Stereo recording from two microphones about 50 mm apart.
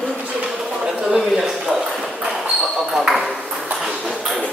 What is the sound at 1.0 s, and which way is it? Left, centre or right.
A man's voice, centre.